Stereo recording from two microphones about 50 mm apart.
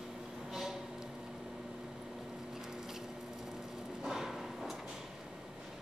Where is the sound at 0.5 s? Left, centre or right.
Centre.